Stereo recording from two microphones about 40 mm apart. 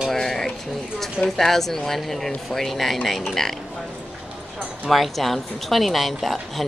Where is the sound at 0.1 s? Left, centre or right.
Centre.